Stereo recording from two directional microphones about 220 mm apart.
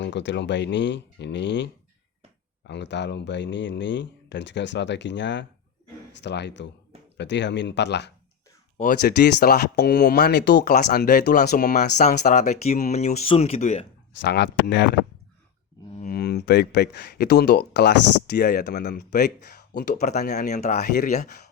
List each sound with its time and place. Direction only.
0.0 s speech: 55° left (ahead or behind)
8.8 s speech: 40° left (ahead or behind)
14.2 s speech: 50° left (ahead or behind)
16.0 s speech: 45° left (ahead or behind)
20.3 s speech: 35° left (ahead or behind)